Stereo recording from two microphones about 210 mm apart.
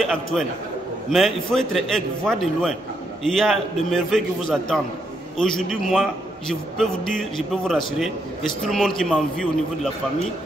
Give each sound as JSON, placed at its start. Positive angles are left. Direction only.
{"t": 0.0, "sound": "a man's voice", "side_deg": 0}